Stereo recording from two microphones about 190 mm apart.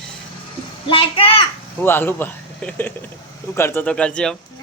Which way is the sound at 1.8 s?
10° left (ahead or behind).